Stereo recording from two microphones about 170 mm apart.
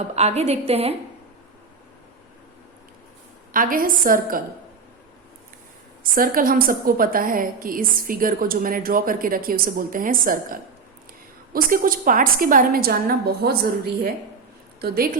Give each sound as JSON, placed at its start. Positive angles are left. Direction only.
{"t": 0.2, "sound": "a woman's voice", "side_deg": -40}
{"t": 3.5, "sound": "a woman's voice", "side_deg": -55}
{"t": 6.0, "sound": "a woman's voice", "side_deg": -55}
{"t": 14.8, "sound": "a woman's voice", "side_deg": -65}